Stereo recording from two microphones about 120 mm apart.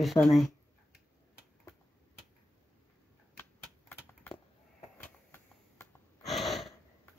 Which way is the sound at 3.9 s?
15° left (ahead or behind).